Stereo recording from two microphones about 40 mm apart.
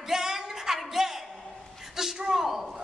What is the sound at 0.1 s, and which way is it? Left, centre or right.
Music, centre.